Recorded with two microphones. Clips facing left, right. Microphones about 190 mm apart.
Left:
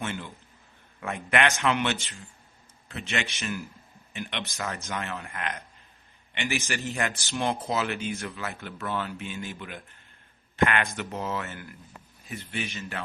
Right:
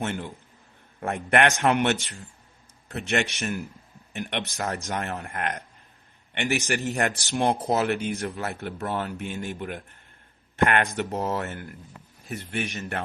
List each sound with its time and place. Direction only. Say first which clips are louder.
0.0 s speech: right 4 dB; 50° right (ahead or behind)
8.2 s speech: right 5 dB; 40° right (ahead or behind)